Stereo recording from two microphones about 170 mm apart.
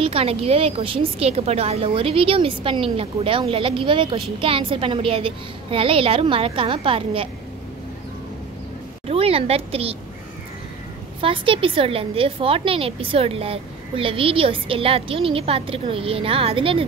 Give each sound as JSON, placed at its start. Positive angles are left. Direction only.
{"t": 0.0, "sound": "a woman's voice", "side_deg": -35}
{"t": 9.0, "sound": "a woman's voice", "side_deg": -35}
{"t": 11.1, "sound": "a woman's voice", "side_deg": -30}